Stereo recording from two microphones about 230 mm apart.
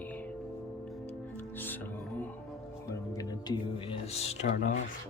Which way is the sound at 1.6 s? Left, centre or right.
Centre.